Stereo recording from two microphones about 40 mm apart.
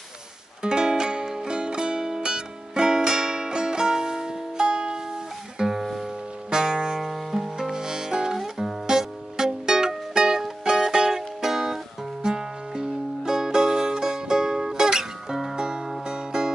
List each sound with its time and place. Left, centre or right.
0.6 s music: centre
5.8 s music: centre
6.5 s music: centre
8.4 s music: centre